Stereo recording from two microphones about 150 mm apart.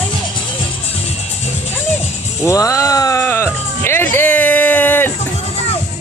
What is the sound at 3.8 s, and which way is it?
Music, 15° left (ahead or behind).